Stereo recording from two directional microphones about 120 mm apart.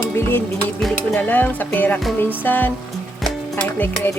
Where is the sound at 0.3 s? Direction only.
20° left (ahead or behind).